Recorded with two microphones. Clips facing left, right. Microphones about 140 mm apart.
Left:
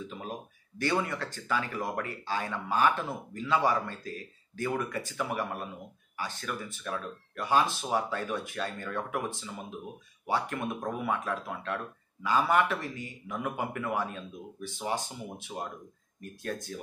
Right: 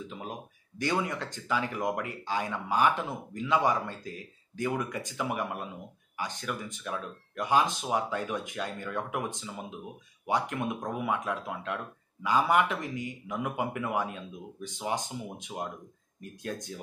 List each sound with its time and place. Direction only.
0.7 s speech: 15° right (ahead or behind)